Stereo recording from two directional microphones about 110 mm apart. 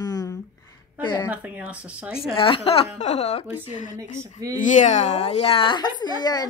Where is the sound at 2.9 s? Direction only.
90° left.